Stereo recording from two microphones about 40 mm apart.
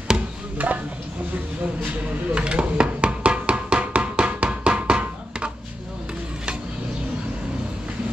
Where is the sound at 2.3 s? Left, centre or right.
Right.